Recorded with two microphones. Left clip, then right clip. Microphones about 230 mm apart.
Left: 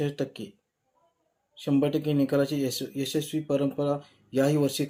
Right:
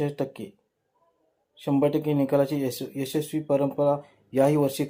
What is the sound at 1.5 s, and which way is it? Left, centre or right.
Speech, centre.